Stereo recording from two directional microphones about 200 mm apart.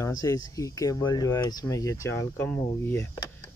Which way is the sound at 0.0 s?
15° left (ahead or behind).